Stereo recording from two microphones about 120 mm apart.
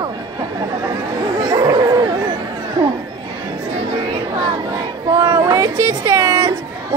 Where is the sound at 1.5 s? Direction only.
35° right (ahead or behind).